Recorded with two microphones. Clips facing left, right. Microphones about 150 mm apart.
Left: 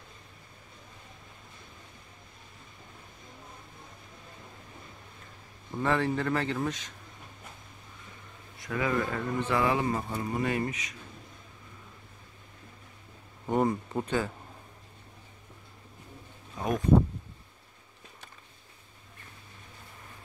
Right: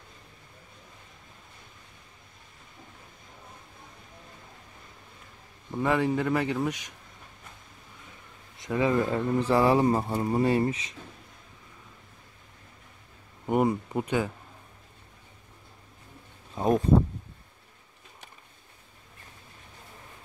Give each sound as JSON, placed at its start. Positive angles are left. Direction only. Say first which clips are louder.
{"t": 5.8, "sound": "speech", "louder": "right 3 dB", "side_deg": -10}
{"t": 8.5, "sound": "speech", "louder": "right 5 dB", "side_deg": -25}
{"t": 13.5, "sound": "speech", "louder": "right 2 dB", "side_deg": -10}
{"t": 16.5, "sound": "a sound", "louder": "right 6 dB", "side_deg": -30}